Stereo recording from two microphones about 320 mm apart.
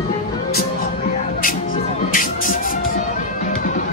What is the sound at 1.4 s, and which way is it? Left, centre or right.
Music, left.